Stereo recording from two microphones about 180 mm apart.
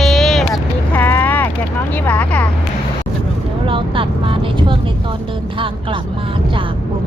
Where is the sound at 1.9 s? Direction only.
10° left (ahead or behind).